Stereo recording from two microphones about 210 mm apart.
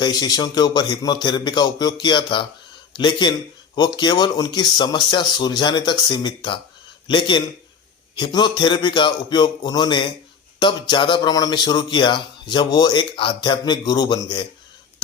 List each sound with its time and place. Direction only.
0.0 s speech: 20° left (ahead or behind)